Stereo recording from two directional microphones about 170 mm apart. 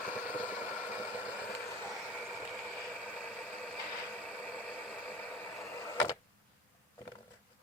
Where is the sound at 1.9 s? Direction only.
Centre (ahead or behind).